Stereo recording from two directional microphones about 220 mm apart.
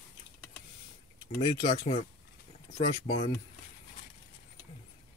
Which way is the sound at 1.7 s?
30° left (ahead or behind).